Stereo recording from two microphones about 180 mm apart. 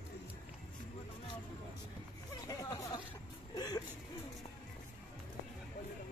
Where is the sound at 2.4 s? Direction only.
20° left (ahead or behind).